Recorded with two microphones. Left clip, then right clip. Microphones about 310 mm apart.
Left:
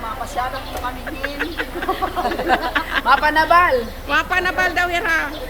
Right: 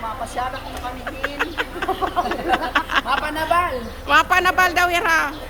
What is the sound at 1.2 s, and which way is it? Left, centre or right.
Chicken, centre.